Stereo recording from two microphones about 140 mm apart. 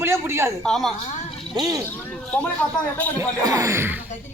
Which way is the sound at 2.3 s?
10° left (ahead or behind).